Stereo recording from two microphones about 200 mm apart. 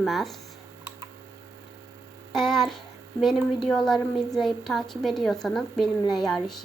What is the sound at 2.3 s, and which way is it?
Speech, centre (ahead or behind).